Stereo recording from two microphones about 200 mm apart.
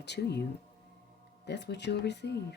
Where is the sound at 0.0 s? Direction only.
55° left (ahead or behind).